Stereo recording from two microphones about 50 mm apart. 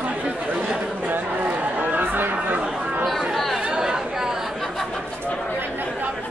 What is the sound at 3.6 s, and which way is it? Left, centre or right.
Chatter, centre.